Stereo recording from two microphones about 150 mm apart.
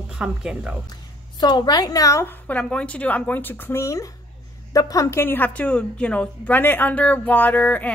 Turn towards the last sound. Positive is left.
turn(degrees=10)  # may be behind; listen again after turning